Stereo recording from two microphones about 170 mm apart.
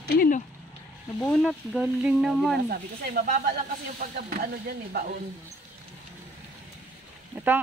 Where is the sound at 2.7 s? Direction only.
60° right (ahead or behind).